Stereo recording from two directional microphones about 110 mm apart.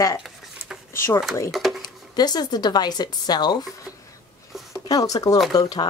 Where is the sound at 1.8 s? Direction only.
40° left (ahead or behind).